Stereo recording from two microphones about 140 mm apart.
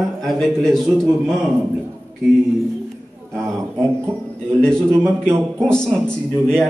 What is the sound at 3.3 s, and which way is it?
Speech, 20° right (ahead or behind).